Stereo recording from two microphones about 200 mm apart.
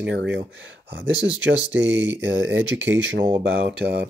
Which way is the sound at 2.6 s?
5° right (ahead or behind).